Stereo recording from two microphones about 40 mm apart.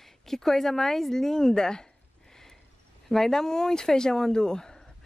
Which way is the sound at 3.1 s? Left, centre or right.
Centre.